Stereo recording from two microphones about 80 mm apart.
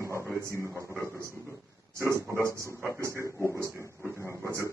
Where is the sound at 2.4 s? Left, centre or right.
Right.